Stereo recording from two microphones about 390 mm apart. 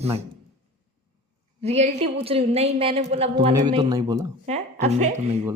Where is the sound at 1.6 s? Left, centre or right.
Centre.